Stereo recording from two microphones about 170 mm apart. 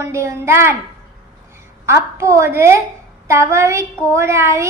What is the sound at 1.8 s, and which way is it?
A woman's voice, 15° right (ahead or behind).